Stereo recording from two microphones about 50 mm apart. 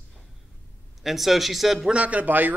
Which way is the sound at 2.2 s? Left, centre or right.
Right.